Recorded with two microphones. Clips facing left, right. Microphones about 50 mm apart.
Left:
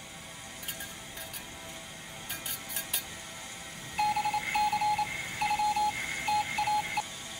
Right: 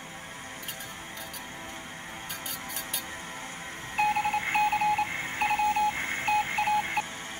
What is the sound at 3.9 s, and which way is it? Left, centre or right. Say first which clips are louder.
Telephone dialing: right 3 dB; right.